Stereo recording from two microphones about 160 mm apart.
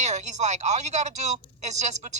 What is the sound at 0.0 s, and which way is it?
Speech, 45° right (ahead or behind).